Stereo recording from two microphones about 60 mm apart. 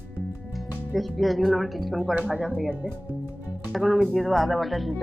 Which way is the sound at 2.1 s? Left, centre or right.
Right.